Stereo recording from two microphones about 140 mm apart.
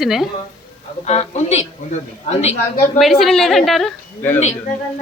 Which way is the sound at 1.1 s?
50° left (ahead or behind).